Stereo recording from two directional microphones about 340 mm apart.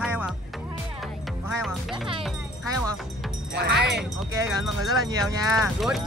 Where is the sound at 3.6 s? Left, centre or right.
Right.